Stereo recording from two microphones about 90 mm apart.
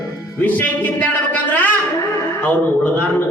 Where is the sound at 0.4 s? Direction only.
20° left (ahead or behind).